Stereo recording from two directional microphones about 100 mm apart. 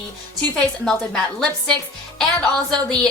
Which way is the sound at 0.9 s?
5° left (ahead or behind).